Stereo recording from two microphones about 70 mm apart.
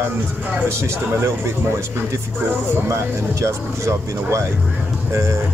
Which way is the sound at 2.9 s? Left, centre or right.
Right.